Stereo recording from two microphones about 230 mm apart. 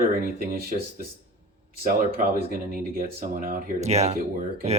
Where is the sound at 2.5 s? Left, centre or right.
Right.